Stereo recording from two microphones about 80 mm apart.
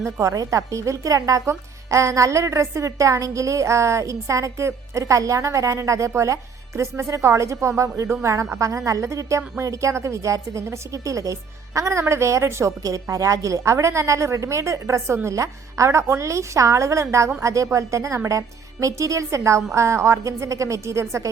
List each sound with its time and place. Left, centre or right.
0.0 s speech: right